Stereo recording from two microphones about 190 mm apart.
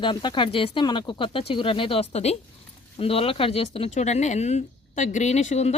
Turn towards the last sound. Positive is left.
turn(degrees=35)  # may be behind; listen again after turning